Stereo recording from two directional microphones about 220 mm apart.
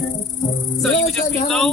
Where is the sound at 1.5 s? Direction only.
Centre (ahead or behind).